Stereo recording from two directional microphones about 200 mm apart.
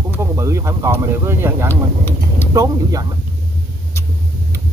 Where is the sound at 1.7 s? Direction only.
10° left (ahead or behind).